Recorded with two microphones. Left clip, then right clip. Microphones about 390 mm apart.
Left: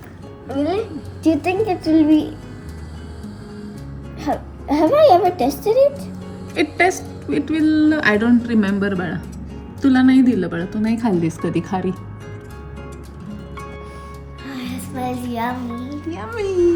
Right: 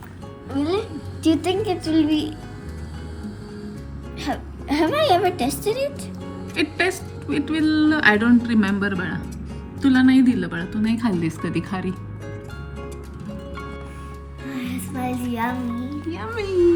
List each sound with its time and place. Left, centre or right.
0.5 s a woman's voice: right
4.7 s a woman's voice: centre
6.5 s a woman's voice: centre
14.9 s music: centre